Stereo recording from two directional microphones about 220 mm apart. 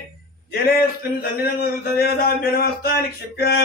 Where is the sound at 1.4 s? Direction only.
45° left (ahead or behind).